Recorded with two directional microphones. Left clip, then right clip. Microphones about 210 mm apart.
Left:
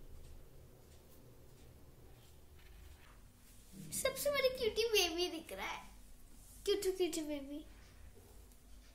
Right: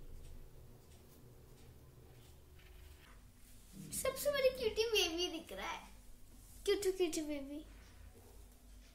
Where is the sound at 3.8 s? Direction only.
25° left (ahead or behind).